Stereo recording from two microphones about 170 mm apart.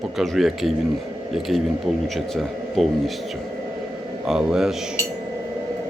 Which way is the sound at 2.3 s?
Centre (ahead or behind).